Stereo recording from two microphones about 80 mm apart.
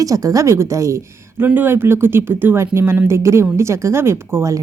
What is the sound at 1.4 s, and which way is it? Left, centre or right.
Speech, right.